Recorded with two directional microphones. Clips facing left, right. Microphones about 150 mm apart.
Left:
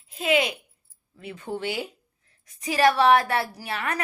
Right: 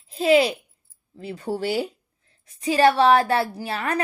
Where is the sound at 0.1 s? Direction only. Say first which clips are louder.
Right 6 dB; 35° right (ahead or behind).